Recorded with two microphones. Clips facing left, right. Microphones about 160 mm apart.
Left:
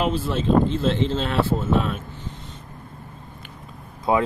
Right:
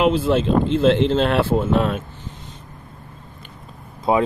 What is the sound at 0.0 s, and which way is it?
Speech, 90° right.